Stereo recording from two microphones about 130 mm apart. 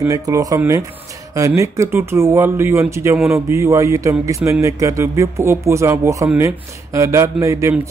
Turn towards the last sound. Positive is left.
turn(degrees=-25)  # may be behind; listen again after turning